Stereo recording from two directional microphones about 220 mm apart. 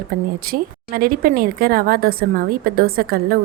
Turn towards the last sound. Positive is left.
turn(degrees=-45)  # may be behind; listen again after turning